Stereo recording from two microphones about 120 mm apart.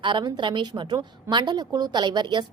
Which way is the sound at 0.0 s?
40° right (ahead or behind).